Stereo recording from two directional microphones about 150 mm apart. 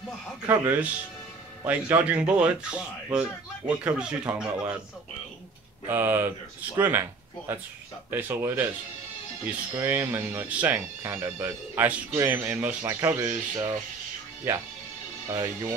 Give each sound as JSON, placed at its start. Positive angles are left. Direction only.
{"t": 0.5, "sound": "speech", "side_deg": -15}
{"t": 5.9, "sound": "speech", "side_deg": -15}
{"t": 9.8, "sound": "speech", "side_deg": -15}